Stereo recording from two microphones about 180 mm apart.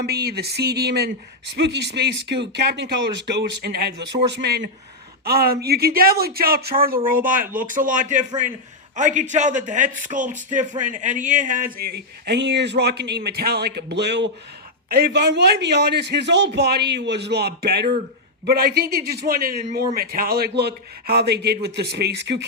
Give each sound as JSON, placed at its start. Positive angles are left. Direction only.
{"t": 0.0, "sound": "a man's voice", "side_deg": -65}